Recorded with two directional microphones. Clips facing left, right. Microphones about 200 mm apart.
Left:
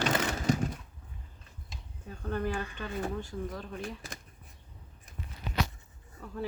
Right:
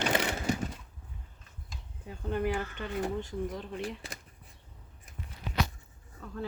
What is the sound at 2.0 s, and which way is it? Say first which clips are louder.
Speech: right 2 dB; 15° right (ahead or behind).